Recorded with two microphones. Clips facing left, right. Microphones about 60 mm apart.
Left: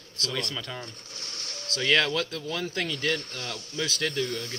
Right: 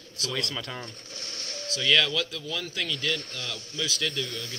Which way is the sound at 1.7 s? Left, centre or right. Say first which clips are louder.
Even; left.